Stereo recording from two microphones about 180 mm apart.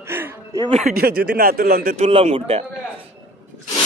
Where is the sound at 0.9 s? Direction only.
60° right (ahead or behind).